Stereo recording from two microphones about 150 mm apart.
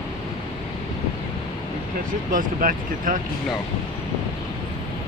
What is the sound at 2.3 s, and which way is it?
Speech, 65° right (ahead or behind).